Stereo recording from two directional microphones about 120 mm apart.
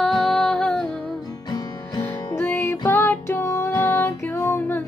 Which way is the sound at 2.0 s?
20° left (ahead or behind).